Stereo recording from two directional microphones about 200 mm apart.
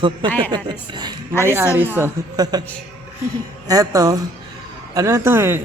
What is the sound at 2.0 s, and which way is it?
Speech, 20° right (ahead or behind).